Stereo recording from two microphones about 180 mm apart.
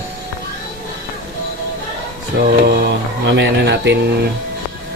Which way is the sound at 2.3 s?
60° right (ahead or behind).